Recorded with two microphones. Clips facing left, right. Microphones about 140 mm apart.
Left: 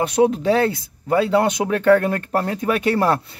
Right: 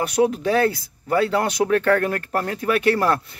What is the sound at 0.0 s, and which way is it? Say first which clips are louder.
Speech: left 3 dB; 25° left (ahead or behind).